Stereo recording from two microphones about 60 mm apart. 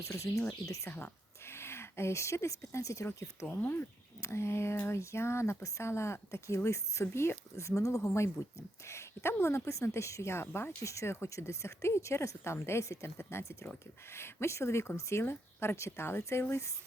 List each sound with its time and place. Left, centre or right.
0.0 s speech: left
0.9 s speech: left
1.5 s speech: left
3.4 s speech: left
4.2 s a woman's voice: left
7.8 s a woman's voice: left